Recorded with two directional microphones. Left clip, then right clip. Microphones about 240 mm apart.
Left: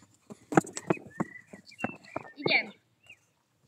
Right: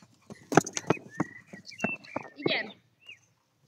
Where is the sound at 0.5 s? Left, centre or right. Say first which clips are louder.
Right 2 dB; right.